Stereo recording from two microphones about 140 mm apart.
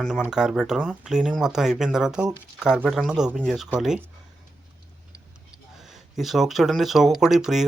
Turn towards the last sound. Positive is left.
turn(degrees=-5)  # may be behind; listen again after turning